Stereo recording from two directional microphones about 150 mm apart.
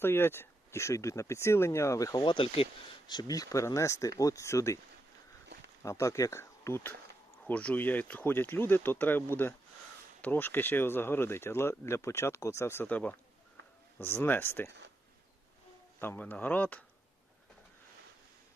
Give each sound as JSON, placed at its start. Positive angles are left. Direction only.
{"t": 0.0, "sound": "speech", "side_deg": 15}
{"t": 5.8, "sound": "speech", "side_deg": 20}
{"t": 16.0, "sound": "speech", "side_deg": 15}